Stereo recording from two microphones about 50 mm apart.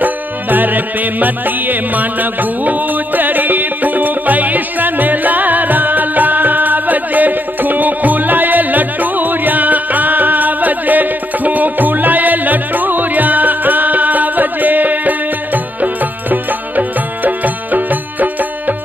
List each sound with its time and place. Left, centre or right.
0.0 s music: right